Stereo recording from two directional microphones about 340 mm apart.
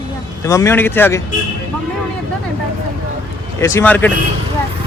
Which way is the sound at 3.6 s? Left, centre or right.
Centre.